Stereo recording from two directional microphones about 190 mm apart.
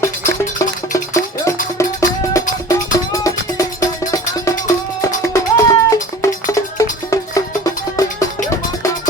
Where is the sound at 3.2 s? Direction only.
15° left (ahead or behind).